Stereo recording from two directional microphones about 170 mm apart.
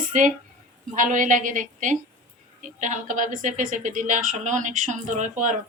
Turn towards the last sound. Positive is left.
turn(degrees=-45)  # may be behind; listen again after turning